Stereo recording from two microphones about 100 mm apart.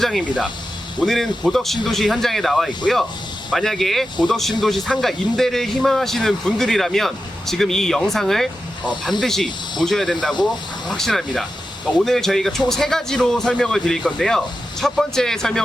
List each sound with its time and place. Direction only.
0.0 s speech: 5° left (ahead or behind)